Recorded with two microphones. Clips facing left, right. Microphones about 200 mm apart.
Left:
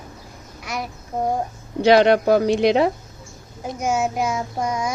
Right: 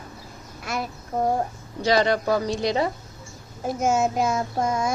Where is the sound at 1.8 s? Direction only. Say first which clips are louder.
Left 7 dB; 65° left (ahead or behind).